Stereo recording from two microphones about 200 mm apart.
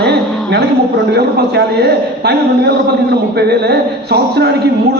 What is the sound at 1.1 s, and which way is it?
A man's voice, 55° right (ahead or behind).